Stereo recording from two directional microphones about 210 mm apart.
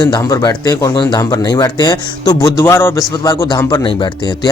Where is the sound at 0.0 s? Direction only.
20° left (ahead or behind).